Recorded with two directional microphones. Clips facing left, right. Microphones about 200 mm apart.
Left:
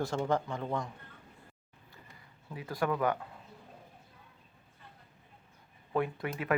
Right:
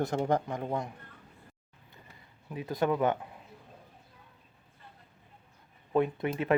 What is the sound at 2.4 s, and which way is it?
Speech, 20° right (ahead or behind).